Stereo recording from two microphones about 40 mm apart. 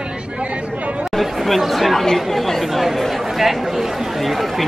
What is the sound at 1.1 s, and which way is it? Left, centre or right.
Speech, centre.